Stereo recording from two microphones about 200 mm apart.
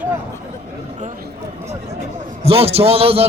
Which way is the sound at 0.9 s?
40° right (ahead or behind).